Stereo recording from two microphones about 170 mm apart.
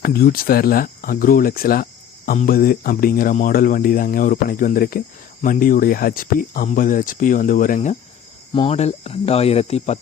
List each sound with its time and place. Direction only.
0.0 s speech: 60° left (ahead or behind)
8.5 s speech: 35° left (ahead or behind)